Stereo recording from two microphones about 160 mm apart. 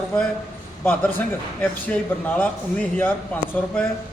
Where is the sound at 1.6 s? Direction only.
10° left (ahead or behind).